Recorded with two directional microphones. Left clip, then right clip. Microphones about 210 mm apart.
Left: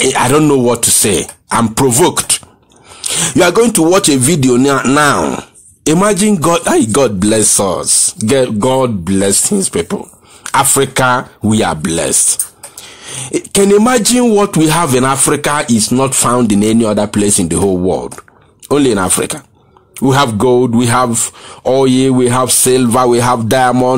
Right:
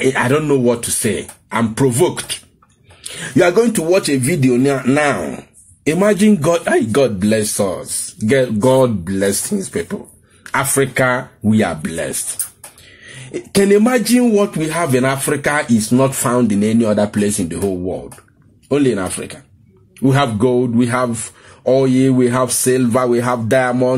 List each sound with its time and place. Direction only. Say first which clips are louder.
0.0 s speech: left 5 dB; 25° left (ahead or behind)
3.0 s speech: left 4 dB; 30° left (ahead or behind)